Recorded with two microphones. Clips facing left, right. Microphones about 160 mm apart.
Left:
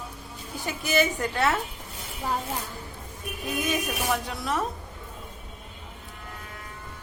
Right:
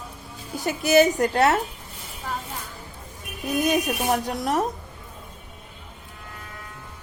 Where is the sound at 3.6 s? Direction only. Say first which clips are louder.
Right 6 dB; 40° right (ahead or behind).